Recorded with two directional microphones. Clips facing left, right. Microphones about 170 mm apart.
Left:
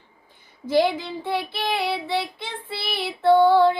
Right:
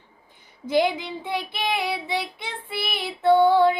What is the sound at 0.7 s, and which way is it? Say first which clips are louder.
Child singing: left 1 dB; 15° right (ahead or behind).